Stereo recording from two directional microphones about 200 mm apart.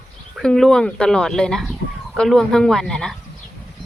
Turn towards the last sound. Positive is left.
turn(degrees=0)  # may be behind; listen again after turning